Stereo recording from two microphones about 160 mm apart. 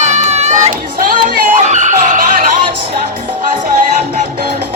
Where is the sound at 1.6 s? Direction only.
50° right (ahead or behind).